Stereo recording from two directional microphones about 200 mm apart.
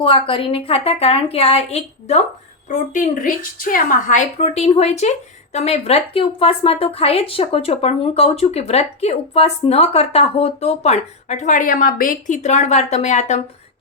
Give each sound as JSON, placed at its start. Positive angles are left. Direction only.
{"t": 0.0, "sound": "a woman's voice", "side_deg": 25}